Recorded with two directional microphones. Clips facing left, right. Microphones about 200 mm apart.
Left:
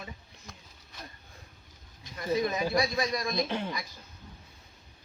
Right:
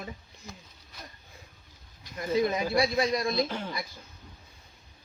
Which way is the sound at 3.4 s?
20° left (ahead or behind).